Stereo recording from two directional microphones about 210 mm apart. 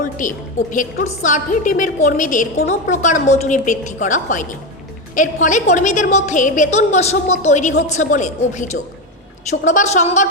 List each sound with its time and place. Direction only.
0.2 s a woman's voice: 40° left (ahead or behind)